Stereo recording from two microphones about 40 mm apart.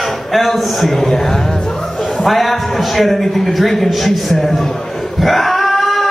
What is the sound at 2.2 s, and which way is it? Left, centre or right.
A man's voice, centre.